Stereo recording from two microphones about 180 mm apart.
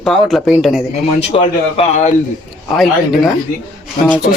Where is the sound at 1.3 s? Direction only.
30° left (ahead or behind).